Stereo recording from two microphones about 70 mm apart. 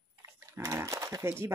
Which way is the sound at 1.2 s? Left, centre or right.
Right.